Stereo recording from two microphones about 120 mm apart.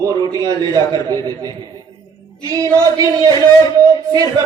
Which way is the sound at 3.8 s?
30° right (ahead or behind).